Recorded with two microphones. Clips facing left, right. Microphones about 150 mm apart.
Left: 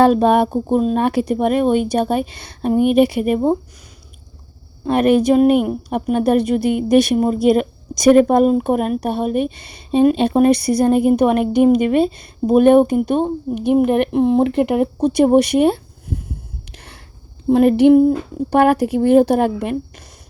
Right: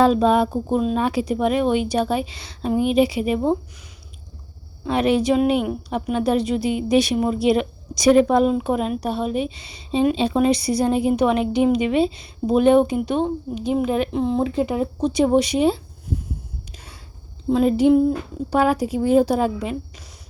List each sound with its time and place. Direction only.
0.0 s speech: 60° left (ahead or behind)
0.7 s a woman's voice: 45° left (ahead or behind)
1.0 s a woman's voice: 55° left (ahead or behind)
4.9 s a woman's voice: 50° left (ahead or behind)
16.1 s a sound: 60° left (ahead or behind)
17.5 s speech: 65° left (ahead or behind)